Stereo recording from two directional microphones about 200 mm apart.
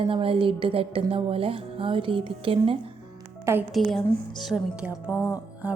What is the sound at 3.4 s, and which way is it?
Speech, 10° right (ahead or behind).